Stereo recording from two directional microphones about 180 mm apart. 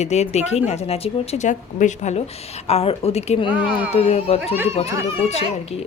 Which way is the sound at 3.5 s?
10° right (ahead or behind).